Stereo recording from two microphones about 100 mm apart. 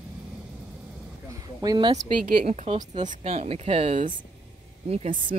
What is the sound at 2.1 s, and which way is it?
A woman's voice, 90° right.